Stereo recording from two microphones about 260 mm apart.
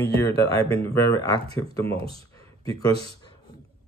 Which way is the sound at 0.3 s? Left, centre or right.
Right.